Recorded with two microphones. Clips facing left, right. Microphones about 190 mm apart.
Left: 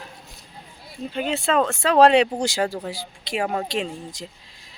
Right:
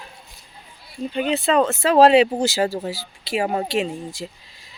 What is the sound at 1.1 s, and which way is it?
Speech, centre (ahead or behind).